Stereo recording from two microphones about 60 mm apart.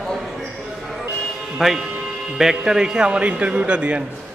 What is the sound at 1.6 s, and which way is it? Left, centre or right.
A man's voice, centre.